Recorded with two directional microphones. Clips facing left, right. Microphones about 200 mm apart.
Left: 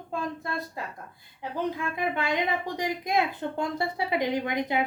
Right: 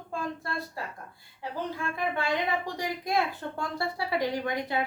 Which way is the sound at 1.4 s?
20° left (ahead or behind).